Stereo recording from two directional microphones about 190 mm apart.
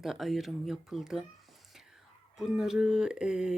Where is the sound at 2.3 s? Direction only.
Centre (ahead or behind).